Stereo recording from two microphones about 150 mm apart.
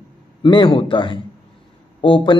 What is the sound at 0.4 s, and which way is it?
A man's voice, 30° left (ahead or behind).